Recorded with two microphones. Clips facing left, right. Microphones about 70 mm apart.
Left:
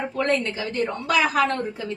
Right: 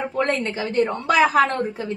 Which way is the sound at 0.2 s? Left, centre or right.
Right.